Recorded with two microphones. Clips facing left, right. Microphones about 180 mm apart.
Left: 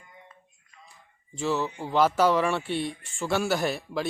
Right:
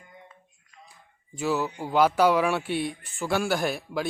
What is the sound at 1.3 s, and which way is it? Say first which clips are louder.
Speech: right 1 dB; 5° right (ahead or behind).